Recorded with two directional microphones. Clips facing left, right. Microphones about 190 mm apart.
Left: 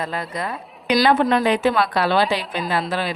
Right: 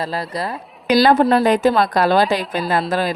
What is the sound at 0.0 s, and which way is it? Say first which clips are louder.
Speech: right 3 dB; 35° right (ahead or behind).